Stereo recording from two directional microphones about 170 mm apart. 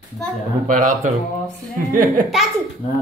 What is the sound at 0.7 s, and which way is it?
A man's voice, 50° right (ahead or behind).